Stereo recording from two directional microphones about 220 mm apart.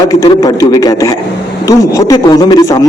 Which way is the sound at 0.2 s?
15° left (ahead or behind).